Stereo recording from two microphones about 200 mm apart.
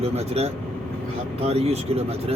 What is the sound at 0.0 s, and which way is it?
Speech, 30° right (ahead or behind).